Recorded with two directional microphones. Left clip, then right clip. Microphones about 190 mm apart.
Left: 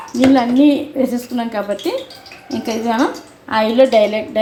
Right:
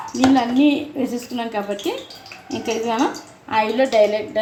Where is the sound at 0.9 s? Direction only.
10° left (ahead or behind).